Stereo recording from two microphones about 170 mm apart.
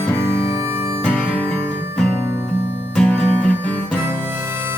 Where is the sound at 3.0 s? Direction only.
5° left (ahead or behind).